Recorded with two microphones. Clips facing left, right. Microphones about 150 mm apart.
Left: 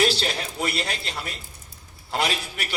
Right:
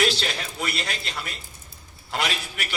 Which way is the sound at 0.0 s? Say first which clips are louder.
Left 2 dB; 30° left (ahead or behind).